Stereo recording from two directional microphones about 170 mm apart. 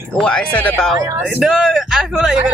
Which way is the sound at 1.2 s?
5° right (ahead or behind).